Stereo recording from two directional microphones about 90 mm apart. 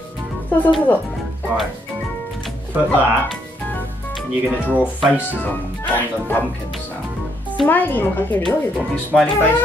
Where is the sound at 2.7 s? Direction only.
20° right (ahead or behind).